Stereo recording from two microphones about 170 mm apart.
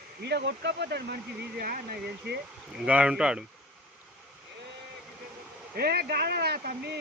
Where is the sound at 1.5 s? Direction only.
60° right (ahead or behind).